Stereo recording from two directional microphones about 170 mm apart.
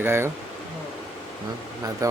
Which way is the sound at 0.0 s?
15° right (ahead or behind).